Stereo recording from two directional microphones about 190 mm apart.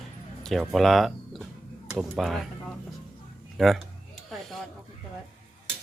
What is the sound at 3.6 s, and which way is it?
Speech, centre (ahead or behind).